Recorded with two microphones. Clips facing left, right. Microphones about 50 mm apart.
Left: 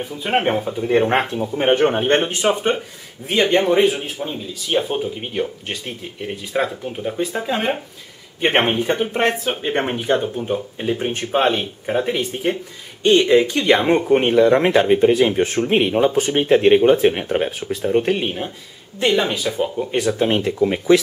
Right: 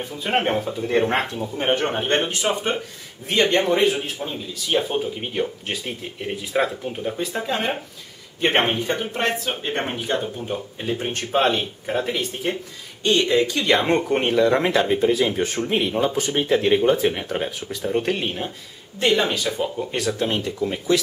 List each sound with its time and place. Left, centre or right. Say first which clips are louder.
0.0 s speech: left 3 dB; centre
3.3 s speech: left 3 dB; centre
15.4 s speech: left 4 dB; centre
15.7 s speech: left 5 dB; left